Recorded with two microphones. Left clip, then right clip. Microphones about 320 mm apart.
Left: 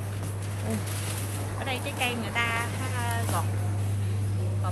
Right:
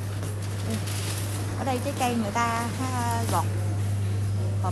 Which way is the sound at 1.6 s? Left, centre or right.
Right.